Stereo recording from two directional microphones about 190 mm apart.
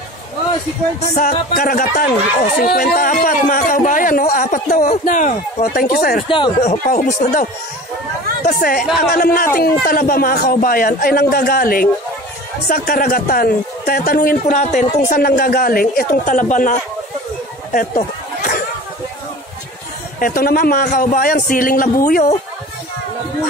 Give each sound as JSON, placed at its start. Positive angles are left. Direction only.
{"t": 1.1, "sound": "a man's voice", "side_deg": 45}
{"t": 6.2, "sound": "speech", "side_deg": 25}
{"t": 6.6, "sound": "a man's voice", "side_deg": 40}
{"t": 8.5, "sound": "a man's voice", "side_deg": 50}
{"t": 17.7, "sound": "a sound", "side_deg": 45}
{"t": 20.2, "sound": "a man's voice", "side_deg": 50}